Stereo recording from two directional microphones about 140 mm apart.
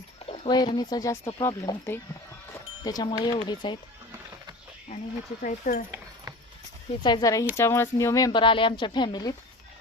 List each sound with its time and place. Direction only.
0.4 s speech: 30° left (ahead or behind)
5.4 s speech: 70° left (ahead or behind)
7.0 s speech: 30° left (ahead or behind)